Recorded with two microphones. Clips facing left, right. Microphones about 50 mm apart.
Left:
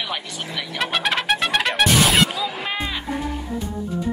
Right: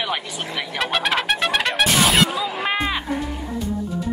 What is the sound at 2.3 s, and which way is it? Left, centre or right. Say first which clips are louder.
Music: right 3 dB; right.